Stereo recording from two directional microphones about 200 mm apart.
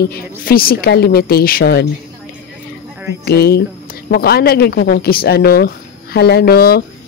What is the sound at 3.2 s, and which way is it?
Speech, 50° left (ahead or behind).